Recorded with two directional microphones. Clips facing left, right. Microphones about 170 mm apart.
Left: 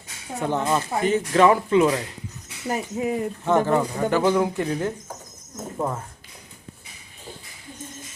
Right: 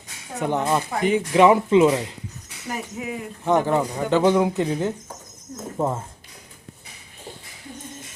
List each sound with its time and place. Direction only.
0.3 s speech: 15° right (ahead or behind)
2.6 s speech: 35° left (ahead or behind)
3.4 s speech: 15° right (ahead or behind)